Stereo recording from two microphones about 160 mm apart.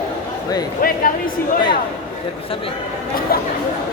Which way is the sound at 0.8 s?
65° left (ahead or behind).